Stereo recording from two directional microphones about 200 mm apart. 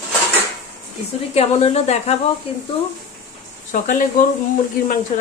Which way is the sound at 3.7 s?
40° left (ahead or behind).